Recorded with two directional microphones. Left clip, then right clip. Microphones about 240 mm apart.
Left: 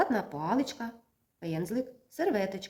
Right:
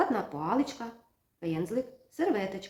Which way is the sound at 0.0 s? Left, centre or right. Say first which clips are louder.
Even; left.